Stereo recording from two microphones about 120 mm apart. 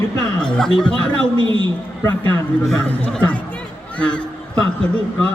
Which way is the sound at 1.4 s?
45° right (ahead or behind).